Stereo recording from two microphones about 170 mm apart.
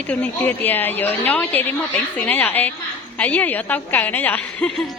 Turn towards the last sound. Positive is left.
turn(degrees=10)  # may be behind; listen again after turning